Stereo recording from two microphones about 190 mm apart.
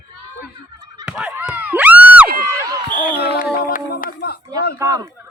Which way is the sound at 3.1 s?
60° left (ahead or behind).